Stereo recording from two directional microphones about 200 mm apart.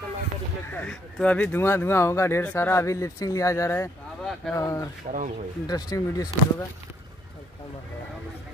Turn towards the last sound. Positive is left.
turn(degrees=20)  # may be behind; listen again after turning